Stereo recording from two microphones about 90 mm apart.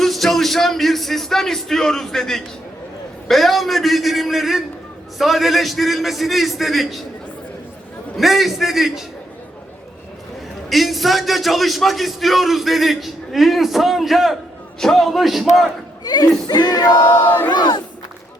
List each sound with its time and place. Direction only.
0.0 s a man's voice: 5° left (ahead or behind)
8.2 s a man's voice: centre (ahead or behind)
10.7 s a man's voice: centre (ahead or behind)
16.0 s a sound: 45° left (ahead or behind)
17.0 s battle cry: 20° left (ahead or behind)
17.5 s speech: 55° left (ahead or behind)